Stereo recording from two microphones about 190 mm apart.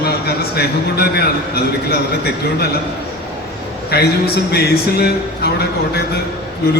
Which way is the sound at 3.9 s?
55° left (ahead or behind).